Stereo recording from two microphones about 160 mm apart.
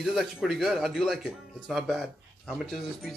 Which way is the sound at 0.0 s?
Centre (ahead or behind).